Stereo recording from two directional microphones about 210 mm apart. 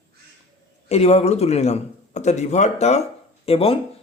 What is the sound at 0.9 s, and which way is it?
A man's voice, 30° left (ahead or behind).